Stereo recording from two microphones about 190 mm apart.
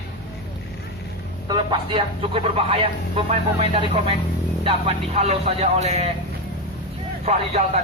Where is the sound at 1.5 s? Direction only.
25° right (ahead or behind).